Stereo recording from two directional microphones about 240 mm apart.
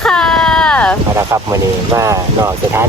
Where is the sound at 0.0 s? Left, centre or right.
Centre.